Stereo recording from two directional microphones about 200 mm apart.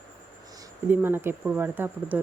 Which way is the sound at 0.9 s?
10° right (ahead or behind).